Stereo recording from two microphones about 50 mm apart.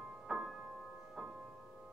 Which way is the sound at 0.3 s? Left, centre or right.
Centre.